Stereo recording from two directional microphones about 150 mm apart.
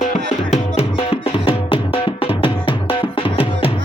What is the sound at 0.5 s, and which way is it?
Music, 40° left (ahead or behind).